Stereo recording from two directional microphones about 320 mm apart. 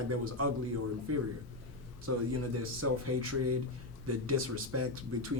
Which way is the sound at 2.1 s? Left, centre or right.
Right.